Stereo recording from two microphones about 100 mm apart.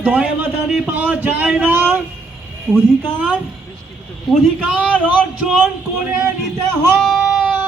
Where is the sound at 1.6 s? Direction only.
20° right (ahead or behind).